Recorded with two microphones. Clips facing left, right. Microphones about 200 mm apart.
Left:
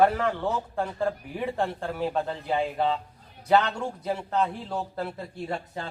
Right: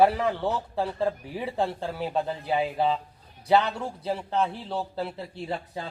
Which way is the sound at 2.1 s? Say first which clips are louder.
Right 1 dB; 10° right (ahead or behind).